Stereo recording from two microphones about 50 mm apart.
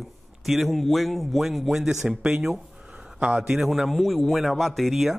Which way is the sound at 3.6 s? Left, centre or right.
Centre.